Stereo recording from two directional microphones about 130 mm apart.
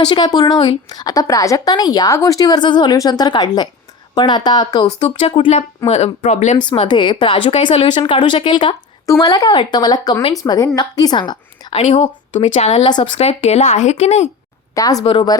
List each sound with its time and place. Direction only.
0.0 s a woman's voice: 35° left (ahead or behind)
5.9 s speech: 60° left (ahead or behind)
6.8 s a woman's voice: 40° left (ahead or behind)
9.0 s a woman's voice: 30° left (ahead or behind)
11.7 s speech: 55° left (ahead or behind)
12.8 s a woman's voice: 35° left (ahead or behind)
13.1 s speech: 50° left (ahead or behind)
14.8 s a woman's voice: 30° left (ahead or behind)